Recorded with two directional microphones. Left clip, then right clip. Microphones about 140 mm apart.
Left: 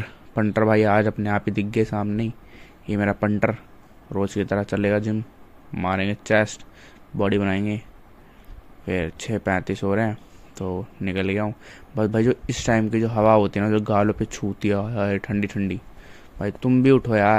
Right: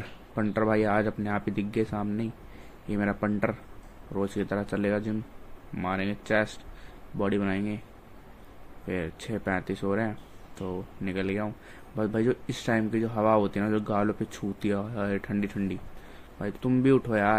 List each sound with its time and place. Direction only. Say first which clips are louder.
0.0 s speech: left 7 dB; 50° left (ahead or behind)
8.8 s speech: left 7 dB; 50° left (ahead or behind)